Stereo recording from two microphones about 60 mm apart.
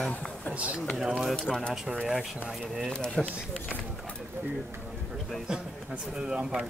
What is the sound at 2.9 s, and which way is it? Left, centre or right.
Speech, centre.